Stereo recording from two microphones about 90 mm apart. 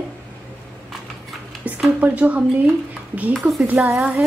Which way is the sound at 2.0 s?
15° right (ahead or behind).